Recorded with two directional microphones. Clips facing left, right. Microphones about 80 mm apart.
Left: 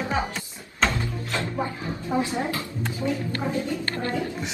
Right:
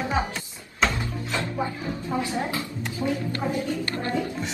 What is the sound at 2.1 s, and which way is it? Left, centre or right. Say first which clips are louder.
Speech: left 3 dB; left.